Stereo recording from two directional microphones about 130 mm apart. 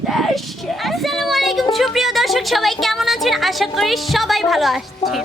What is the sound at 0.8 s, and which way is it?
Music, centre (ahead or behind).